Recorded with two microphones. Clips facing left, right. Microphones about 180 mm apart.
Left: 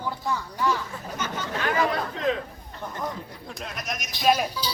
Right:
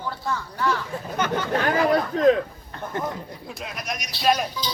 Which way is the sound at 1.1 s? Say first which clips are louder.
Right 7 dB; 60° right (ahead or behind).